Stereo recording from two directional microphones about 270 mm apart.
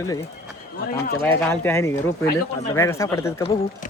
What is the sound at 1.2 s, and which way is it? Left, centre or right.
Speech, centre.